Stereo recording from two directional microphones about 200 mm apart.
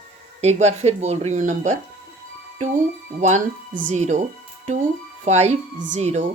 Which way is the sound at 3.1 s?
35° right (ahead or behind).